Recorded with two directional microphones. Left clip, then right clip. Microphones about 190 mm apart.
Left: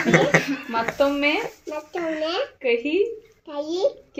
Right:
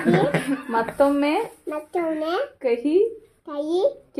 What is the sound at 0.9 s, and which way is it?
A child's voice, 20° right (ahead or behind).